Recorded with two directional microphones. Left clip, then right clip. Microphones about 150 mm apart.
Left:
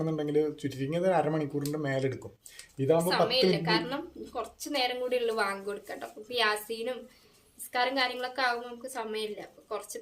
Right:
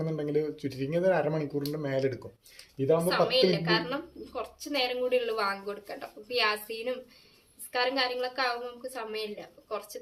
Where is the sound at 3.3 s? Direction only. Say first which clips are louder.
Right 1 dB; 15° left (ahead or behind).